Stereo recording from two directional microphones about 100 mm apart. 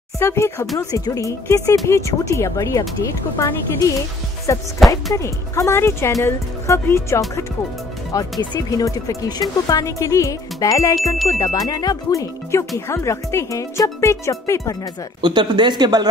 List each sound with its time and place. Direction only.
0.2 s speech: 25° left (ahead or behind)
4.7 s speech: centre (ahead or behind)
5.1 s speech: 30° left (ahead or behind)
15.2 s speech: 50° right (ahead or behind)